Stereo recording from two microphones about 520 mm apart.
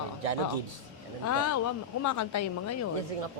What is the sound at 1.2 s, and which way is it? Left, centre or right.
A woman's voice, left.